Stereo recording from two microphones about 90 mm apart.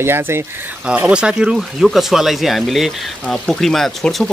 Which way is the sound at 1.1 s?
10° right (ahead or behind).